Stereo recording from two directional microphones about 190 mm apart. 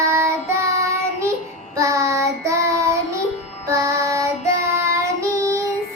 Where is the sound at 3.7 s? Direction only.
15° right (ahead or behind).